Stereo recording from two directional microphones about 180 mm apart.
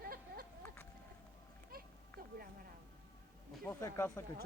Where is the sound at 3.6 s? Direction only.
15° left (ahead or behind).